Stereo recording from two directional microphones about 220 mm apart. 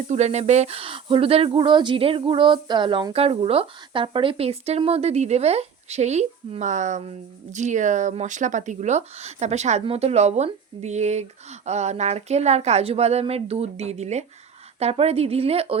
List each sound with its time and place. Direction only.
0.1 s speech: 30° right (ahead or behind)